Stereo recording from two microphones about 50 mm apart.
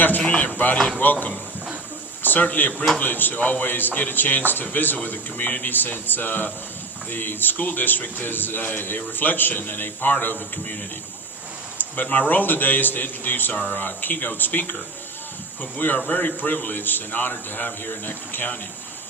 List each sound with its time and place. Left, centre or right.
0.3 s a man's voice: left
2.7 s speech: centre
3.0 s a man's voice: left
11.8 s a sound: left
12.3 s a man's voice: left
15.8 s a man's voice: left